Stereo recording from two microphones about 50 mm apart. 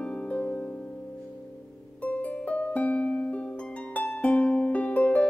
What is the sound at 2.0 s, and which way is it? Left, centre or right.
Music, left.